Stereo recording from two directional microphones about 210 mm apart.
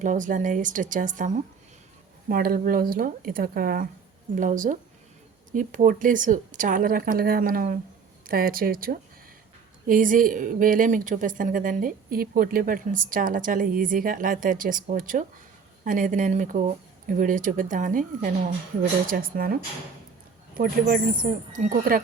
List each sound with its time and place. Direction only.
0.0 s a woman's voice: 35° right (ahead or behind)
20.6 s a woman's voice: 40° right (ahead or behind)